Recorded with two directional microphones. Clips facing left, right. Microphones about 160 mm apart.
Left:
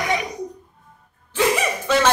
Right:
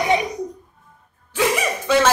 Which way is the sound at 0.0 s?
25° right (ahead or behind).